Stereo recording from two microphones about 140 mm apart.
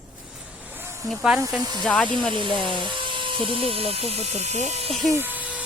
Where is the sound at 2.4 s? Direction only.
35° left (ahead or behind).